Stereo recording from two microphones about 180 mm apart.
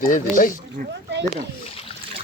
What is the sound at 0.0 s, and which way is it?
Speech, 50° left (ahead or behind).